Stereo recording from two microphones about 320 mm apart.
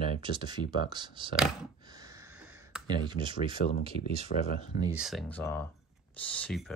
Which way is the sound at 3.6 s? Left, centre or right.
Left.